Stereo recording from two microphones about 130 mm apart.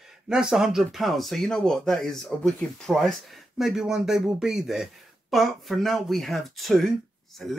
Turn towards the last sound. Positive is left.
turn(degrees=0)  # may be behind; listen again after turning